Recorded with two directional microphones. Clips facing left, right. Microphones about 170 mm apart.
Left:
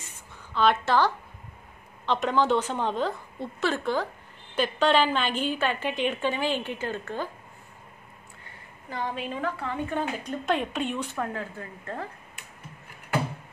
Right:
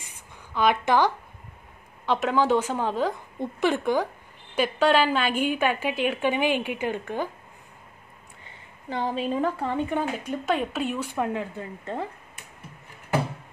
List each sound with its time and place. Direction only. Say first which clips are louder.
0.0 s a sound: even; 15° right (ahead or behind)
2.0 s speech: right 2 dB; 5° right (ahead or behind)
8.9 s a woman's voice: right 6 dB; 30° right (ahead or behind)
9.7 s speech: right 3 dB; 15° right (ahead or behind)